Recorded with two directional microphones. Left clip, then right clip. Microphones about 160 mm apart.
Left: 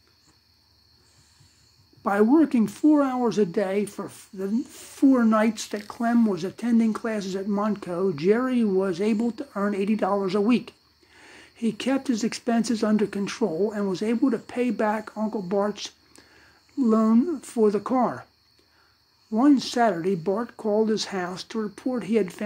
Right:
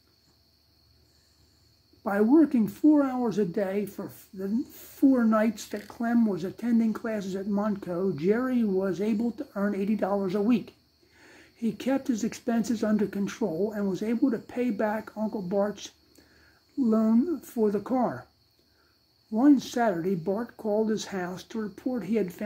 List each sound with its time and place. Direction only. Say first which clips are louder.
2.0 s speech: left 2 dB; 30° left (ahead or behind)
19.3 s speech: left 2 dB; 25° left (ahead or behind)